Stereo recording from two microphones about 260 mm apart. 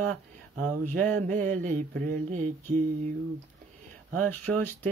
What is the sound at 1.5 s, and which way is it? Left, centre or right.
Speech, right.